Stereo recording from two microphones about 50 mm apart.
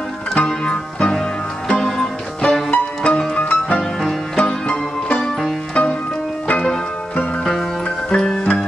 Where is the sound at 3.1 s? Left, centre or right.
Centre.